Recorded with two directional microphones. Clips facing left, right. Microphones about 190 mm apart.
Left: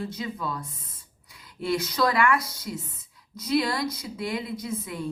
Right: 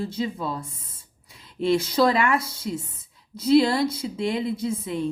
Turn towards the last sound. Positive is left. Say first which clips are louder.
# right 6 dB
turn(degrees=-25)  # may be behind; listen again after turning